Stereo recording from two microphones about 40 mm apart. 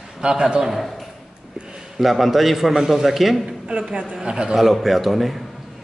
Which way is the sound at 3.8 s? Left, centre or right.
Centre.